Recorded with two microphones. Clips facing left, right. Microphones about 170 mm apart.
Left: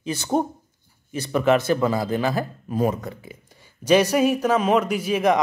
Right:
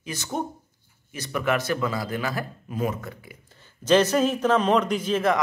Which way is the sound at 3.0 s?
25° left (ahead or behind).